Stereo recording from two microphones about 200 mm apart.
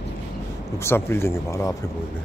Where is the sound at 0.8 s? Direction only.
15° left (ahead or behind).